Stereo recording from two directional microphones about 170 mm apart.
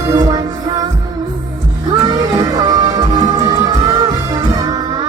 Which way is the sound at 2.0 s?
20° right (ahead or behind).